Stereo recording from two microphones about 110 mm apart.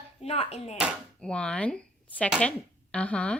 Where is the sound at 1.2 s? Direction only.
10° left (ahead or behind).